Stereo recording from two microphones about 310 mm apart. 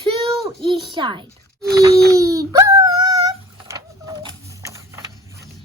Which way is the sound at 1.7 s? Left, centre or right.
Centre.